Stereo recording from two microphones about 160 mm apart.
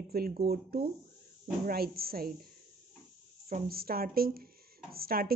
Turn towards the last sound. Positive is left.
turn(degrees=-65)  # may be behind; listen again after turning